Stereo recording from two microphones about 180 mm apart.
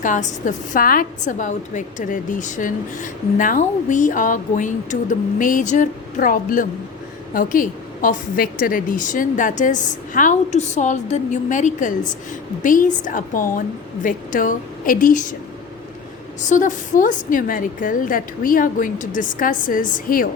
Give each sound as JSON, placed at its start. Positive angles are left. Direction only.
{"t": 0.0, "sound": "a woman's voice", "side_deg": 45}
{"t": 16.4, "sound": "a woman's voice", "side_deg": 45}